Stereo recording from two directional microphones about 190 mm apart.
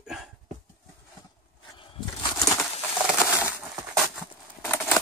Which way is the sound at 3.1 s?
10° right (ahead or behind).